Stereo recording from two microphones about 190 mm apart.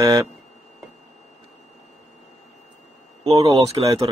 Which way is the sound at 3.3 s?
15° right (ahead or behind).